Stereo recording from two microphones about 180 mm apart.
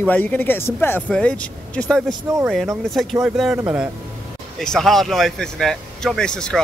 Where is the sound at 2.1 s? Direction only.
20° right (ahead or behind).